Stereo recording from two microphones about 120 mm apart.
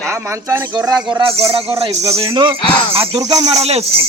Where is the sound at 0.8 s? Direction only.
35° right (ahead or behind).